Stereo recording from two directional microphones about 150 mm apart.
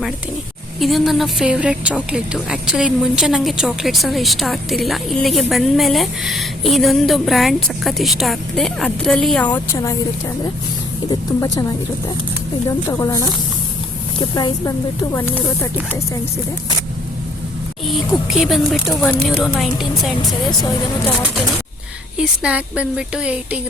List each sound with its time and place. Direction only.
0.8 s speech: centre (ahead or behind)
9.7 s speech: 25° left (ahead or behind)
11.1 s speech: 25° left (ahead or behind)
15.1 s speech: 15° left (ahead or behind)
17.8 s speech: centre (ahead or behind)
22.2 s a woman's voice: 5° right (ahead or behind)